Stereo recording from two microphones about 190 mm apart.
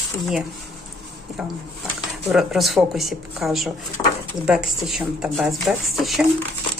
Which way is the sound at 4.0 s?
20° left (ahead or behind).